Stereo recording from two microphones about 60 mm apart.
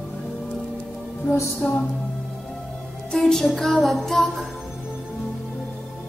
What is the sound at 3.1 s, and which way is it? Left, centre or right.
Music, centre.